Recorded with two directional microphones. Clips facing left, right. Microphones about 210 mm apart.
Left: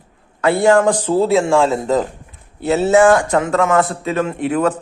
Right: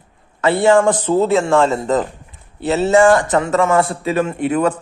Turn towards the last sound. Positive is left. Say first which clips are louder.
# even
turn(degrees=0)  # may be behind; listen again after turning